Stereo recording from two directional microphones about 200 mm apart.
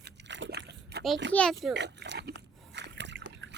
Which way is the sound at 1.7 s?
60° right (ahead or behind).